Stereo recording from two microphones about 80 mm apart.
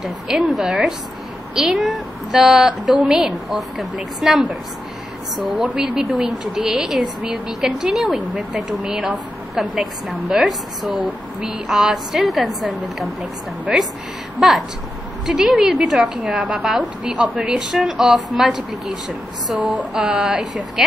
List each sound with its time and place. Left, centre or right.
0.0 s a woman's voice: centre
5.8 s a woman's voice: centre
15.2 s a woman's voice: centre
19.6 s a woman's voice: centre